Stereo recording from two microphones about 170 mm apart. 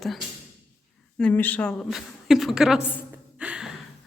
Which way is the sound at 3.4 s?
5° right (ahead or behind).